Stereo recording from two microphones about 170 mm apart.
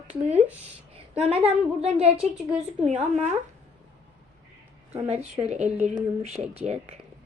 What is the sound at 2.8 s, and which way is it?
Speech, 45° right (ahead or behind).